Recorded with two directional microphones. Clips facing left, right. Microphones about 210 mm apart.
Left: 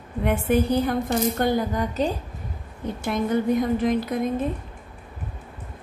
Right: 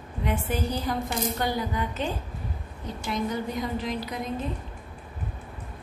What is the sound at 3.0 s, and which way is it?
A woman's voice, 55° left (ahead or behind).